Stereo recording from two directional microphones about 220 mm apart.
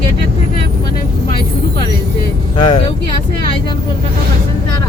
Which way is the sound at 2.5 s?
25° left (ahead or behind).